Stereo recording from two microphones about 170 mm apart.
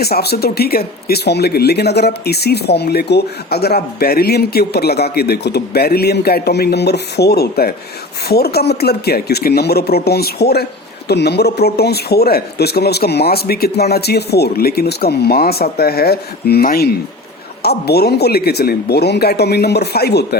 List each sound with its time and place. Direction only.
0.0 s speech: 70° left (ahead or behind)